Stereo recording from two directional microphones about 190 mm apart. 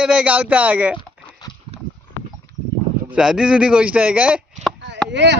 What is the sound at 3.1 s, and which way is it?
Speech, 5° right (ahead or behind).